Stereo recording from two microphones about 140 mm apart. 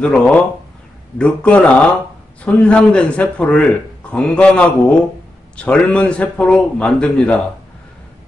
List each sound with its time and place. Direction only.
0.0 s a man's voice: 10° left (ahead or behind)